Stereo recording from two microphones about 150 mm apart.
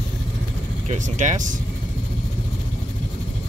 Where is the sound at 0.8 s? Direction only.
55° right (ahead or behind).